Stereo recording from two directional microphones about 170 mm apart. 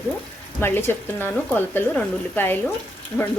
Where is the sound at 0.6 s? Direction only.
15° left (ahead or behind).